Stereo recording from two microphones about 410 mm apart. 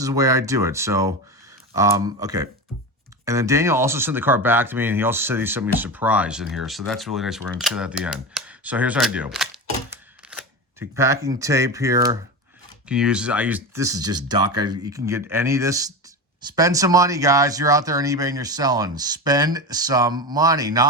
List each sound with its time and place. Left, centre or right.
0.0 s speech: centre
9.9 s camera: centre
12.9 s speech: centre